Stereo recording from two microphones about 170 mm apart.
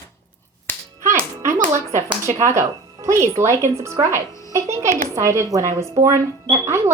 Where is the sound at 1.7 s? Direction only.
15° right (ahead or behind).